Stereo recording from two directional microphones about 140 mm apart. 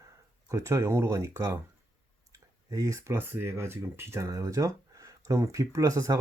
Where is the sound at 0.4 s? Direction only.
20° right (ahead or behind).